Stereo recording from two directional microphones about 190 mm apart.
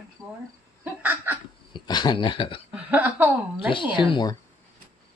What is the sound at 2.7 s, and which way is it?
Speech, 10° right (ahead or behind).